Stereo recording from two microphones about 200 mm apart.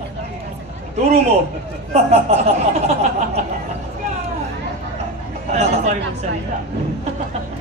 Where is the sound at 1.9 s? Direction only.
30° right (ahead or behind).